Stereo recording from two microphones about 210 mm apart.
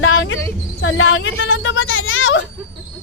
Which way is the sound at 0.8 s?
65° left (ahead or behind).